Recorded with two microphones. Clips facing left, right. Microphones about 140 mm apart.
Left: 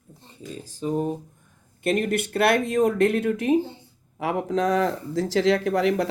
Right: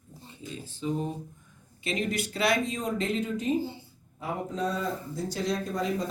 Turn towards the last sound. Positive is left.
turn(degrees=85)